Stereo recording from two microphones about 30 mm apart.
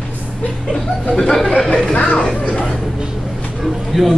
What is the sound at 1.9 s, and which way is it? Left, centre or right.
Speech, left.